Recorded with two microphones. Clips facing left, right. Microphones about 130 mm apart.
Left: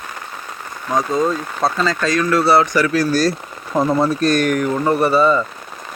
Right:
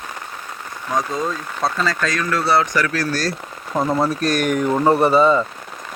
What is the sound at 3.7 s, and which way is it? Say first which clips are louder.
Speech: left 3 dB; centre (ahead or behind).